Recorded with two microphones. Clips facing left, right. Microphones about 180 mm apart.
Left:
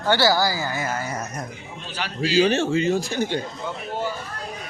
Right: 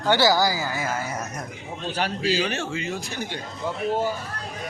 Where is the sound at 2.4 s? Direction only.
30° left (ahead or behind).